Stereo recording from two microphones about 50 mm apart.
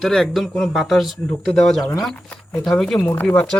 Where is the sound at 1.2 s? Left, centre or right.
Centre.